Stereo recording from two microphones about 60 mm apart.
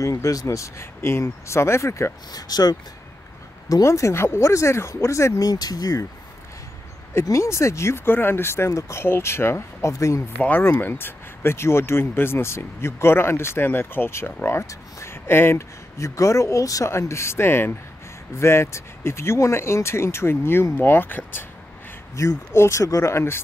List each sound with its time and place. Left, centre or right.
0.0 s speech: left
2.3 s speech: left
3.6 s speech: left
5.4 s speech: left
7.2 s speech: left
9.0 s speech: left
10.4 s speech: left
14.7 s speech: left
15.2 s speech: left
16.0 s speech: left
16.9 s speech: left
22.1 s speech: left